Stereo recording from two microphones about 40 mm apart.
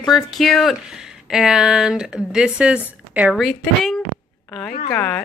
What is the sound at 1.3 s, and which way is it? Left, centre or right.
A woman's voice, centre.